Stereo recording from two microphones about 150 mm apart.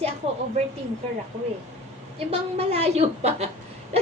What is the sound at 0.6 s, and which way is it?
Speech, 50° right (ahead or behind).